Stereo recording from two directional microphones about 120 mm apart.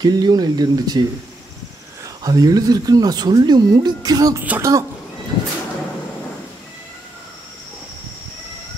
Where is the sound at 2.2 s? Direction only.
30° right (ahead or behind).